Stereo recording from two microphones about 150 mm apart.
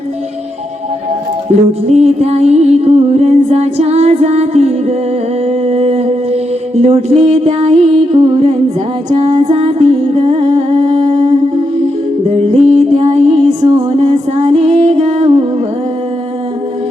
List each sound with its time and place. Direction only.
1.9 s music: 45° right (ahead or behind)
5.5 s mantra: 45° right (ahead or behind)
8.1 s music: 35° right (ahead or behind)
9.0 s singing: 50° right (ahead or behind)
12.5 s music: 45° right (ahead or behind)